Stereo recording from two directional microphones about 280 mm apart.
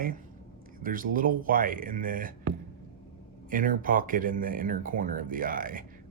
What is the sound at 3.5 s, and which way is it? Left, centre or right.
Speech, right.